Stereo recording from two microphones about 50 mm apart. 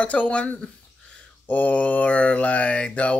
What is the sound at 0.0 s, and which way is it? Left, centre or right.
Mantra, left.